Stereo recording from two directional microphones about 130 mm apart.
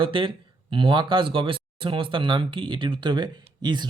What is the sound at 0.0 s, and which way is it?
Speech, 40° right (ahead or behind).